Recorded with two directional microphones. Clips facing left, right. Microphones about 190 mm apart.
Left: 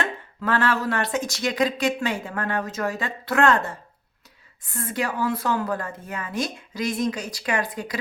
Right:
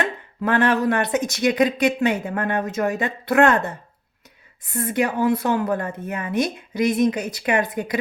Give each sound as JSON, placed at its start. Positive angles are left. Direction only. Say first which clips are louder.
{"t": 0.0, "sound": "speech", "louder": "right 4 dB", "side_deg": -20}